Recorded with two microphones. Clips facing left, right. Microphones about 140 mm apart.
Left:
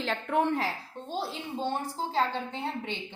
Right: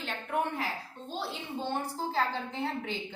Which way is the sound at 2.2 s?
25° left (ahead or behind).